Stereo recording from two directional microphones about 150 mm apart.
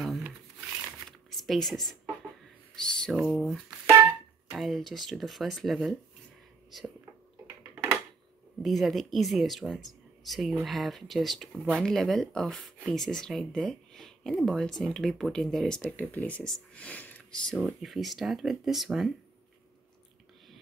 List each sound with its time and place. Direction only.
1.3 s speech: centre (ahead or behind)
3.9 s music: 20° right (ahead or behind)
4.6 s speech: centre (ahead or behind)
7.4 s a sound: 15° right (ahead or behind)
8.6 s speech: centre (ahead or behind)